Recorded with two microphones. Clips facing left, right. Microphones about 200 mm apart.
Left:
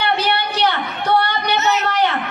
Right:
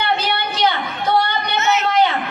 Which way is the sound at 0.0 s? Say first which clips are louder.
Left 1 dB; 65° left (ahead or behind).